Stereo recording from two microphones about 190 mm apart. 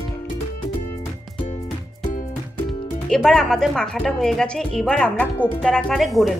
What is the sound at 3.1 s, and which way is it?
Speech, 5° left (ahead or behind).